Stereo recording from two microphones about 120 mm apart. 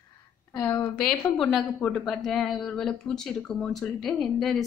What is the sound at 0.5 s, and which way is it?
Speech, 15° left (ahead or behind).